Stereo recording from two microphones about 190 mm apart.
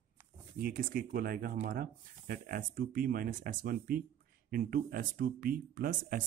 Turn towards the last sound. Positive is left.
turn(degrees=-45)  # may be behind; listen again after turning